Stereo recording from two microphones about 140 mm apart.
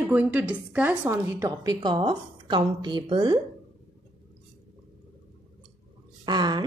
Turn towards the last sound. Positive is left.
turn(degrees=-30)  # may be behind; listen again after turning